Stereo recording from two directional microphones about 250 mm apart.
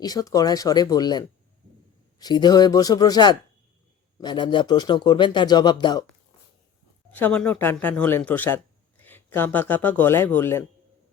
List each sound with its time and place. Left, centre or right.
0.0 s speech: centre
7.1 s speech: centre